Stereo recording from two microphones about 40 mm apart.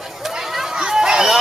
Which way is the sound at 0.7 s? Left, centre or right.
Centre.